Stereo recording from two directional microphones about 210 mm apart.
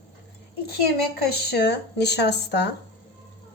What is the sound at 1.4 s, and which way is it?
Speech, 50° left (ahead or behind).